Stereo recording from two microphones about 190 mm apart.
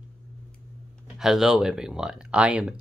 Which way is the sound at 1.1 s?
Centre (ahead or behind).